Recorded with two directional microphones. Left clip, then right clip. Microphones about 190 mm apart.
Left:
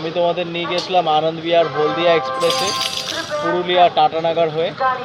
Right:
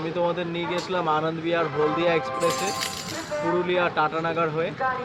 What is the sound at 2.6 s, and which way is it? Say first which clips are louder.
Speech: left 8 dB; 45° right (ahead or behind).